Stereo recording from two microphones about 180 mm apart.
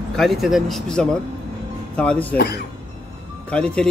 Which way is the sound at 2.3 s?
60° left (ahead or behind).